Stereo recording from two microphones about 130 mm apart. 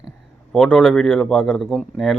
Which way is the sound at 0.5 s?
Centre (ahead or behind).